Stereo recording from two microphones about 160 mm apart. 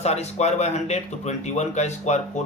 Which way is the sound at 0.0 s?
45° left (ahead or behind).